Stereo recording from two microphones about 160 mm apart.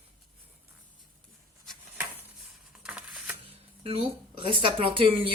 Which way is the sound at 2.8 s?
5° right (ahead or behind).